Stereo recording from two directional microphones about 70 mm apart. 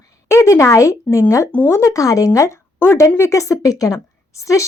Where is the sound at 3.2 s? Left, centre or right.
Left.